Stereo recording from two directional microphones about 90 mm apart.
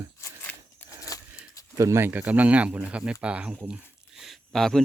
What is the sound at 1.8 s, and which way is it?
Speech, 30° right (ahead or behind).